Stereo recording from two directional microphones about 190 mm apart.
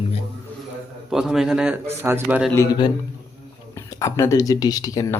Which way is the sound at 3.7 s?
15° left (ahead or behind).